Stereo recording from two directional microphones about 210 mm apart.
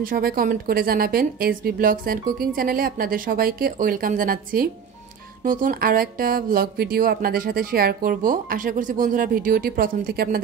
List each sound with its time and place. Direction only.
0.0 s speech: 45° right (ahead or behind)